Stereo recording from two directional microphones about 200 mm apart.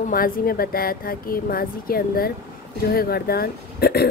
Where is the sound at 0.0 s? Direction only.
45° left (ahead or behind).